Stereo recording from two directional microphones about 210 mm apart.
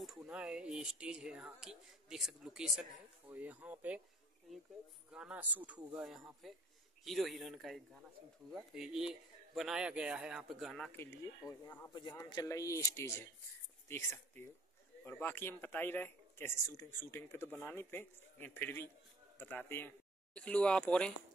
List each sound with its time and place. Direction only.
0.0 s speech: 5° right (ahead or behind)
5.1 s speech: 5° right (ahead or behind)